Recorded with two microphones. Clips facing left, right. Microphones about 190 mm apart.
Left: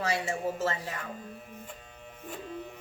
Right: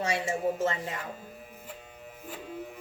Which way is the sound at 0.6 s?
20° right (ahead or behind).